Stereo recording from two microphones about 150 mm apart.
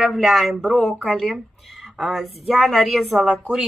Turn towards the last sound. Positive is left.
turn(degrees=0)  # may be behind; listen again after turning